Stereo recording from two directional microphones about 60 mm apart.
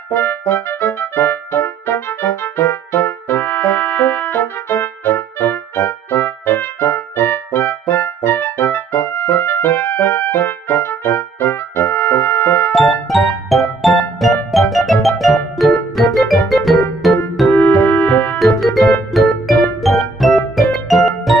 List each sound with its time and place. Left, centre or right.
0.1 s music: left
3.1 s brass instrument: left
9.0 s music: left
12.7 s music: centre
17.5 s music: left
18.1 s music: left
18.4 s music: centre